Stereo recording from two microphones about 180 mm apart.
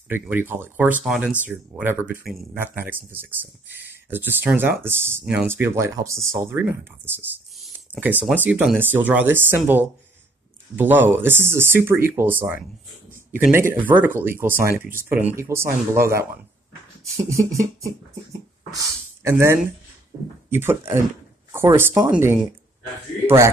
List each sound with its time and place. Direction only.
0.1 s speech: 10° right (ahead or behind)